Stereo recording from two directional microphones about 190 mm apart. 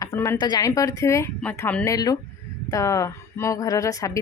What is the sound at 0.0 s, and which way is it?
Speech, 15° left (ahead or behind).